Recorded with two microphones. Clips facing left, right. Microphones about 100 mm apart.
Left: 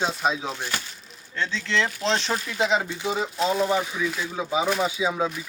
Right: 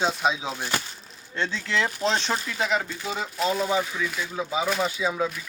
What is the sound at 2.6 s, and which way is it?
Speech, 20° left (ahead or behind).